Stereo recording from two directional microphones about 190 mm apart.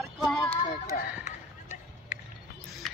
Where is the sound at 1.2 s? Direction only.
35° left (ahead or behind).